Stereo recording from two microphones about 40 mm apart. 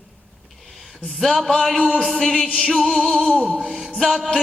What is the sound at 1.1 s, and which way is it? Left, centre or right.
Music, centre.